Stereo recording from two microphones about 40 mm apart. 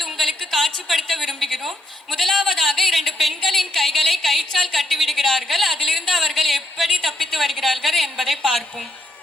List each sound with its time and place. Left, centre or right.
0.0 s a woman's voice: centre